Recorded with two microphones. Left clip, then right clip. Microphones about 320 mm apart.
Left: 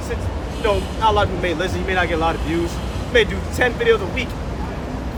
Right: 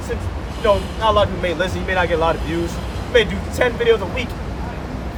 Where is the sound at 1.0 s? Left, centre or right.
Centre.